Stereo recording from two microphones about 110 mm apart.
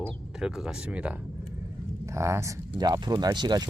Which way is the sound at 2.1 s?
25° right (ahead or behind).